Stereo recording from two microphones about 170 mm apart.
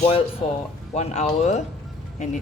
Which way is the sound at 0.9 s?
40° left (ahead or behind).